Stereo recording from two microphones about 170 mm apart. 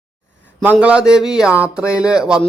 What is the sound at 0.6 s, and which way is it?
Speech, 5° right (ahead or behind).